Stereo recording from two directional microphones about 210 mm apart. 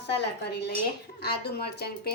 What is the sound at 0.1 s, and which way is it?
Speech, 55° left (ahead or behind).